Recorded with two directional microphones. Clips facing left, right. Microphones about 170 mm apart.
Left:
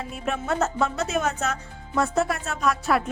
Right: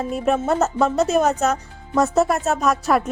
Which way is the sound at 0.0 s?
40° right (ahead or behind).